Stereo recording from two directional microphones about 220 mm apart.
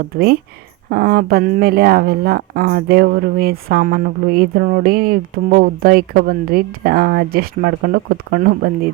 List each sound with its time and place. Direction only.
0.1 s speech: 45° right (ahead or behind)